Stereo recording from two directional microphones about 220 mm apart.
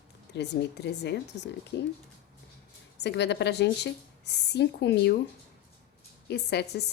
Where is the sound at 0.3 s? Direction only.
50° left (ahead or behind).